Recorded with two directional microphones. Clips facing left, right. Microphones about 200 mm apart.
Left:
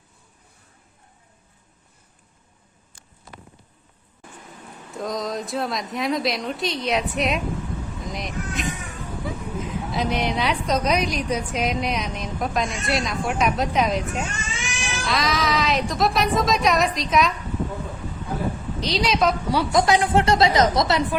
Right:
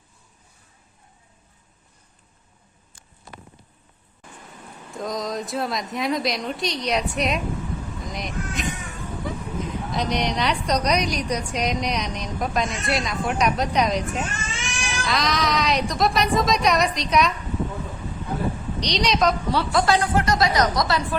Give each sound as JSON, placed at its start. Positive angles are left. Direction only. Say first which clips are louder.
{"t": 4.9, "sound": "a woman's voice", "louder": "even", "side_deg": 0}
{"t": 9.9, "sound": "a woman's voice", "louder": "left 1 dB", "side_deg": 5}
{"t": 18.8, "sound": "a woman's voice", "louder": "even", "side_deg": 5}